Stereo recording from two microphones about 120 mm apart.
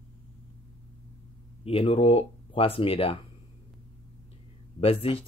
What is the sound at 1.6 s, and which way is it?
Speech, 55° left (ahead or behind).